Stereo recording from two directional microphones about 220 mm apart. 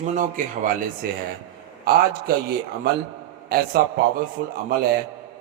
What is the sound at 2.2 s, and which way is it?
A man's voice, 45° right (ahead or behind).